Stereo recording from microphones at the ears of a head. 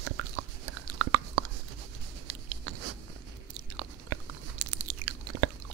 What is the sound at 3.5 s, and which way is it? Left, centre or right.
Chewing, right.